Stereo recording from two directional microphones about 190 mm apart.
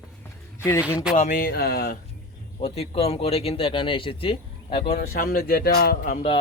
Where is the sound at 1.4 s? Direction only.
50° left (ahead or behind).